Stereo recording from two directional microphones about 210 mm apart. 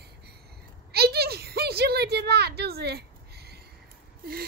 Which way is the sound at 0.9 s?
50° right (ahead or behind).